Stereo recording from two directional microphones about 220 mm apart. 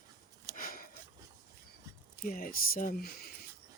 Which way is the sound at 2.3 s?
40° left (ahead or behind).